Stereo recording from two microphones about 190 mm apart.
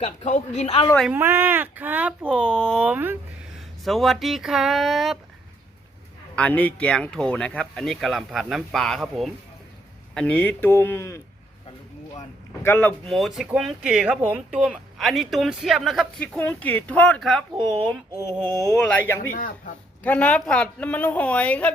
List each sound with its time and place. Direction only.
0.0 s speech: 40° left (ahead or behind)
1.1 s speech: 10° right (ahead or behind)
6.3 s speech: 5° left (ahead or behind)
12.6 s speech: 10° left (ahead or behind)
18.1 s a sound: 20° right (ahead or behind)
18.8 s speech: 5° left (ahead or behind)
19.3 s speech: 45° left (ahead or behind)
20.0 s speech: 10° left (ahead or behind)